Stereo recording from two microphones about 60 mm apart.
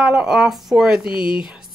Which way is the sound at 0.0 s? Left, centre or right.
Centre.